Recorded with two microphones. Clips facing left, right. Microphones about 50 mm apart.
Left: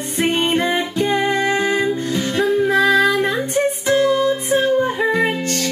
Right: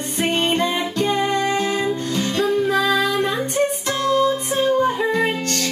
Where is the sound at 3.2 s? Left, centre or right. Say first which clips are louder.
Left 1 dB; centre.